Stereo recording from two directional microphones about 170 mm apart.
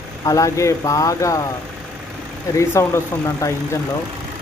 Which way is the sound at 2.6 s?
15° left (ahead or behind).